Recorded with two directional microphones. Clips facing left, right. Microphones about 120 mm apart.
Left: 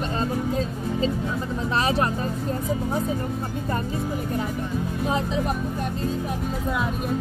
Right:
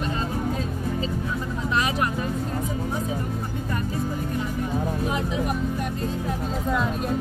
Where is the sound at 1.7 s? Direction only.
30° left (ahead or behind).